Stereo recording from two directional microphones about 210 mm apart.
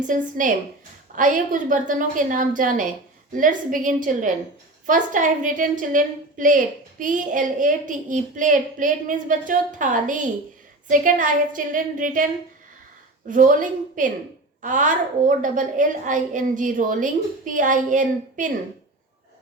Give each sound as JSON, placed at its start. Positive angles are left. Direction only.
{"t": 0.1, "sound": "a woman's voice", "side_deg": -40}